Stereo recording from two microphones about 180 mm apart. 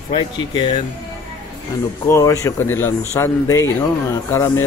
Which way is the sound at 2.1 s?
15° left (ahead or behind).